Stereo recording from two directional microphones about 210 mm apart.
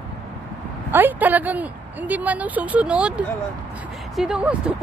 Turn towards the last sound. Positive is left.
turn(degrees=-5)  # may be behind; listen again after turning